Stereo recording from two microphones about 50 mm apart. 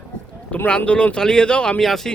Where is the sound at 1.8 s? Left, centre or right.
Centre.